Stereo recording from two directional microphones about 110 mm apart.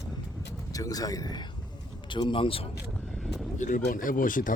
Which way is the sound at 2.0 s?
45° left (ahead or behind).